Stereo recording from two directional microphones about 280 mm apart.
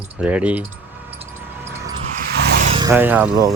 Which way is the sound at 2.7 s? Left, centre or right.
Centre.